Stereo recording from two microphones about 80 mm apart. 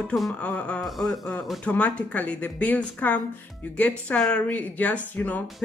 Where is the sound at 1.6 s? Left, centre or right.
Centre.